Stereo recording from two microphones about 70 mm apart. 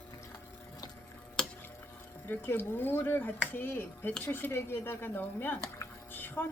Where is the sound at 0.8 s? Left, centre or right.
Left.